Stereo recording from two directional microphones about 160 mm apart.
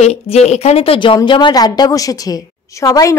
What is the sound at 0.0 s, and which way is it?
A woman's voice, 45° left (ahead or behind).